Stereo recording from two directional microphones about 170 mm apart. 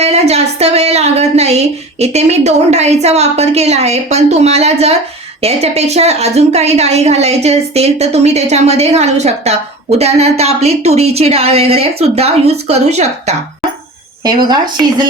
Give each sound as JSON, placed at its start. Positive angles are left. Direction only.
{"t": 0.0, "sound": "a woman's voice", "side_deg": -40}
{"t": 14.3, "sound": "a woman's voice", "side_deg": -25}